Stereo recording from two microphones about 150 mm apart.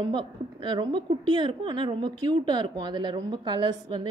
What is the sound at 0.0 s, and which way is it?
A woman's voice, 30° right (ahead or behind).